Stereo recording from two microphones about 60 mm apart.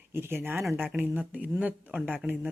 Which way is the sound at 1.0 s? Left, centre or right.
Right.